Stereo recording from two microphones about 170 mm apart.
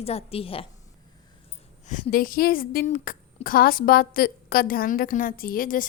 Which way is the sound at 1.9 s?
55° left (ahead or behind).